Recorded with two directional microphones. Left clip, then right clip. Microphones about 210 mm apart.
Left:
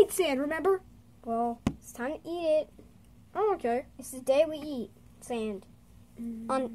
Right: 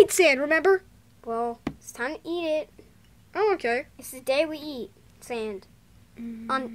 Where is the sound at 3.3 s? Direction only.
10° right (ahead or behind).